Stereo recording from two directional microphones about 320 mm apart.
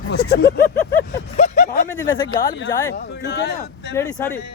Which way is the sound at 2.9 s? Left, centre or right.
Left.